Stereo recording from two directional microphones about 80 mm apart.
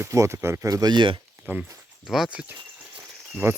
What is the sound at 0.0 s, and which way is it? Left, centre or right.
Speech, right.